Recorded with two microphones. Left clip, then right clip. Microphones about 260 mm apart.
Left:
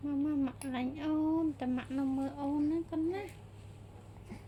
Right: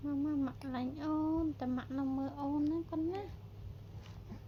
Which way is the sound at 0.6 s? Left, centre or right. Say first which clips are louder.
Left 3 dB; centre.